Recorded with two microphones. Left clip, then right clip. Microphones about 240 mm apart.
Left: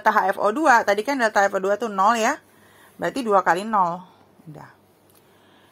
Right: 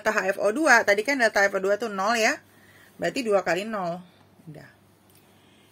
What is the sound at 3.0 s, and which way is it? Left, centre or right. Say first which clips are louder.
Speech: left 4 dB; left.